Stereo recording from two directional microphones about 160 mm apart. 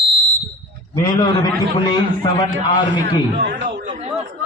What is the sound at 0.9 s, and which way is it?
Speech, 20° left (ahead or behind).